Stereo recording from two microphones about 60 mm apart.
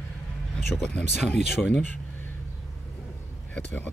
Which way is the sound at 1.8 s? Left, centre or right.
Left.